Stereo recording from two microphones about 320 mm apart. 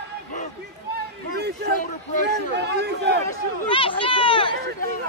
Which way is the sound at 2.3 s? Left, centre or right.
Right.